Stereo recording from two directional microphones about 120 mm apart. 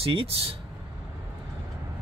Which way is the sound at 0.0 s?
50° right (ahead or behind).